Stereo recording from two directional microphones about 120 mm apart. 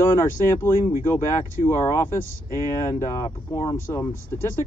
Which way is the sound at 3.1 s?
40° left (ahead or behind).